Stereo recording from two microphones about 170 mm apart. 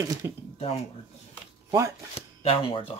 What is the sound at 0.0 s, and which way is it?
Speech, 20° right (ahead or behind).